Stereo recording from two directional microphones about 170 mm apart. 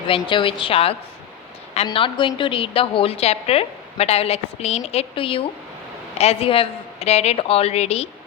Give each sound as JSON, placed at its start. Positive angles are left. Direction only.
{"t": 0.1, "sound": "a woman's voice", "side_deg": 30}